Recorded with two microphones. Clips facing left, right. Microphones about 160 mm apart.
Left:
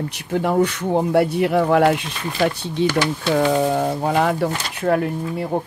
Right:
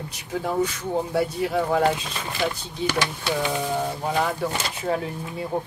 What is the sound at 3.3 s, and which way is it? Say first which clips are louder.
Speech: left 9 dB; 70° left (ahead or behind).